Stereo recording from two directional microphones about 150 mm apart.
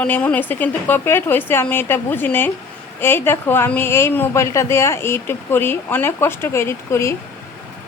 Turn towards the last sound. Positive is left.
turn(degrees=15)  # may be behind; listen again after turning